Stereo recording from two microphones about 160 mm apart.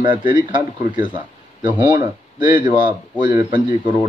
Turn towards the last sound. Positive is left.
turn(degrees=-30)  # may be behind; listen again after turning